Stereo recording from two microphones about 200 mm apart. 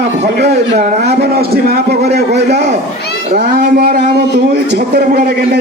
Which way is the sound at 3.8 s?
55° right (ahead or behind).